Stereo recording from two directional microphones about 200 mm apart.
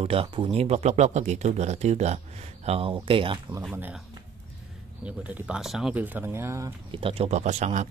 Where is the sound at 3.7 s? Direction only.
10° right (ahead or behind).